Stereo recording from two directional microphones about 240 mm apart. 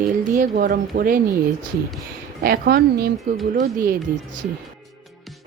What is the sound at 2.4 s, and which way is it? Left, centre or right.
Speech, right.